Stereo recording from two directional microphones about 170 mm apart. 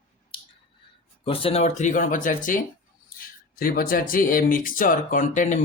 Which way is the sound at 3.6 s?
55° left (ahead or behind).